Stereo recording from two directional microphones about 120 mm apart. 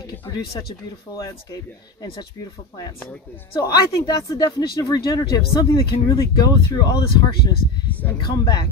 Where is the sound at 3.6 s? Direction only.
30° left (ahead or behind).